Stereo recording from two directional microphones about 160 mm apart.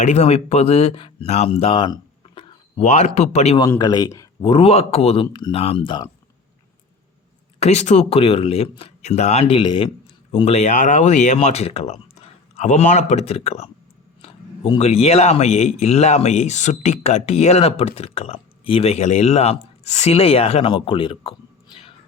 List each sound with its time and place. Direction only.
0.0 s speech: 45° left (ahead or behind)
3.6 s speech: 20° left (ahead or behind)
4.4 s speech: 40° left (ahead or behind)
7.6 s speech: 45° left (ahead or behind)